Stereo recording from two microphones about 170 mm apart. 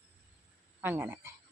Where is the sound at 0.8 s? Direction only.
10° right (ahead or behind).